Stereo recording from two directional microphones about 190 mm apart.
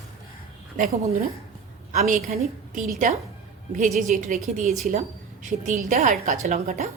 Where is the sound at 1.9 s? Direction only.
40° right (ahead or behind).